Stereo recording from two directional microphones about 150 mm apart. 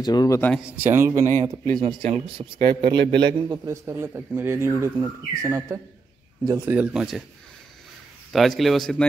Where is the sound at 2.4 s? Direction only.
30° right (ahead or behind).